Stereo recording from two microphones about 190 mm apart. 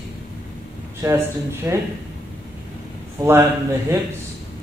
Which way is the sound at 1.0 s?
15° right (ahead or behind).